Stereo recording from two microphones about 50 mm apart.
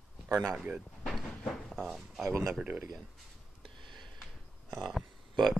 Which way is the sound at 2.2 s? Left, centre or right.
Right.